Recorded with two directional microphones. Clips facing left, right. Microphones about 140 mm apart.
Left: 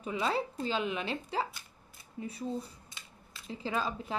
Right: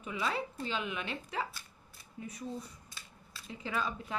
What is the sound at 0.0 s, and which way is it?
Speech, 35° left (ahead or behind).